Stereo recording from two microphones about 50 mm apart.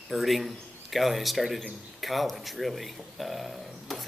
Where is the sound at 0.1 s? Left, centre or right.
Centre.